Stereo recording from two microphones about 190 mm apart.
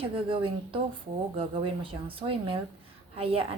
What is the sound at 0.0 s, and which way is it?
A woman's voice, 25° right (ahead or behind).